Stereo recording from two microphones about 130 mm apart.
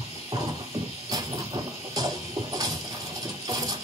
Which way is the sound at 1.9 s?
30° right (ahead or behind).